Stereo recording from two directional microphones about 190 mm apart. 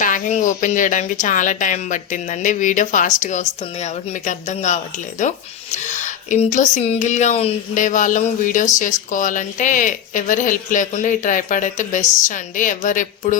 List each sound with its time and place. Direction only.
0.0 s speech: 40° left (ahead or behind)